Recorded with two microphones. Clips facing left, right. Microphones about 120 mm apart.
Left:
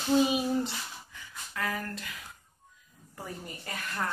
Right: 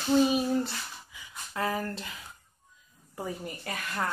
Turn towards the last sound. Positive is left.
turn(degrees=-15)  # may be behind; listen again after turning